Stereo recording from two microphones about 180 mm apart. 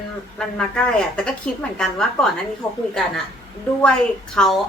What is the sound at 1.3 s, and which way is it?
A woman's voice, 5° left (ahead or behind).